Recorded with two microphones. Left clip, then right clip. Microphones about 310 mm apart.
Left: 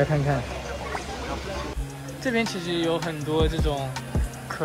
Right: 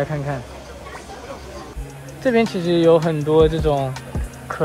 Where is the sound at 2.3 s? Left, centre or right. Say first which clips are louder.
Right 8 dB; centre.